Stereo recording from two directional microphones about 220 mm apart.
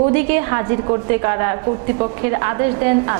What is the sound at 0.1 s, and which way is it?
A woman's voice, 15° right (ahead or behind).